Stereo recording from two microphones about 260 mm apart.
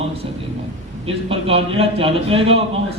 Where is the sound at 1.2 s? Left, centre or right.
Right.